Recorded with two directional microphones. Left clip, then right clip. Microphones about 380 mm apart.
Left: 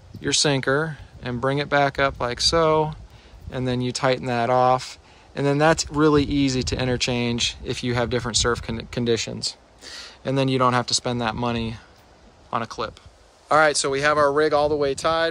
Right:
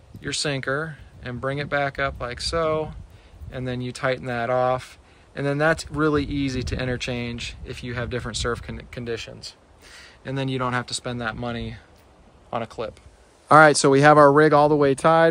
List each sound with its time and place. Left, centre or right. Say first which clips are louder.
0.2 s speech: left 5 dB; centre
13.5 s speech: right 5 dB; centre